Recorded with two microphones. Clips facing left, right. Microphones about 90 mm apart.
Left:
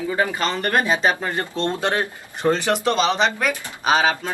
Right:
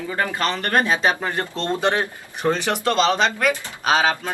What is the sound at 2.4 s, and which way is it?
Speech, centre (ahead or behind).